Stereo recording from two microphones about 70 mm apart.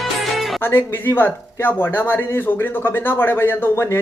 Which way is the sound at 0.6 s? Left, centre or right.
Left.